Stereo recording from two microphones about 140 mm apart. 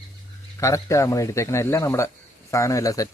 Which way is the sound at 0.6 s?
20° left (ahead or behind).